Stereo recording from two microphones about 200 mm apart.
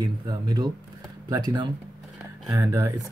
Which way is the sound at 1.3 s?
25° right (ahead or behind).